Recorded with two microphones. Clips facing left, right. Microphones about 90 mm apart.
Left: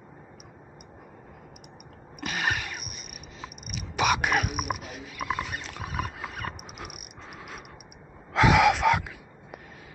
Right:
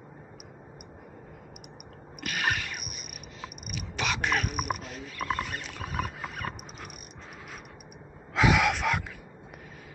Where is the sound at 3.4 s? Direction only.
20° left (ahead or behind); by 6.9 s centre (ahead or behind).